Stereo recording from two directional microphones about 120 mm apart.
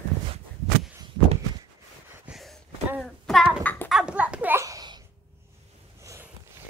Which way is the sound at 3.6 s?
15° left (ahead or behind).